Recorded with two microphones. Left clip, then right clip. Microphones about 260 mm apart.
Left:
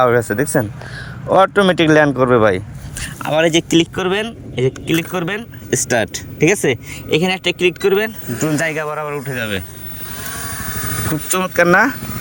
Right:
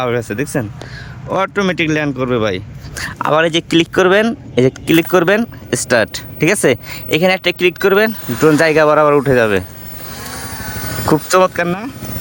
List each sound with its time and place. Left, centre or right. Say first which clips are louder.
0.0 s speech: left 4 dB; centre
10.2 s vehicle: left 1 dB; centre
11.5 s speech: left 8 dB; centre